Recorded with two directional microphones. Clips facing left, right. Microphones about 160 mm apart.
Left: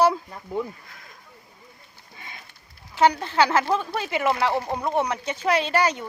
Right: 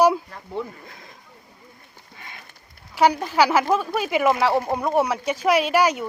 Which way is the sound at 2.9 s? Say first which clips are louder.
Right 1 dB; 10° right (ahead or behind).